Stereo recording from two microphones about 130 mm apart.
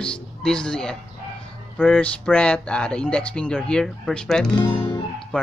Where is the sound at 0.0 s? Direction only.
5° left (ahead or behind).